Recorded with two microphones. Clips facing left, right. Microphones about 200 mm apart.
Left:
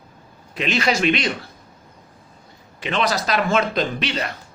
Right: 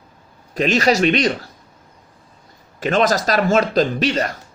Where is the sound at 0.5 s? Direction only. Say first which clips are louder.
Right 5 dB; 40° right (ahead or behind).